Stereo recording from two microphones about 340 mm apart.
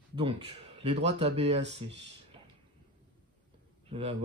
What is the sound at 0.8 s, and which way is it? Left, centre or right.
Speech, centre.